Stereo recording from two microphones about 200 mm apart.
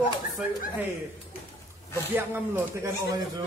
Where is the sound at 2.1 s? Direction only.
10° right (ahead or behind).